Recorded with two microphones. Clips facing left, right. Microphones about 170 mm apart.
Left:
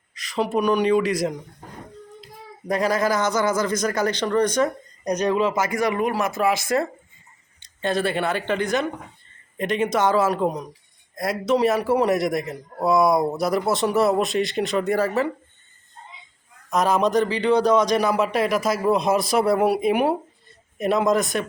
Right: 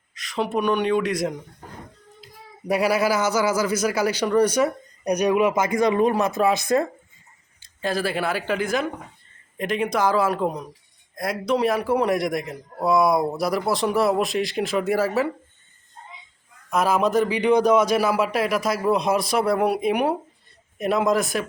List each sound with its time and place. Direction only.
0.1 s speech: centre (ahead or behind); by 6.8 s 20° right (ahead or behind)
7.8 s a man's voice: centre (ahead or behind)
16.6 s a man's voice: centre (ahead or behind)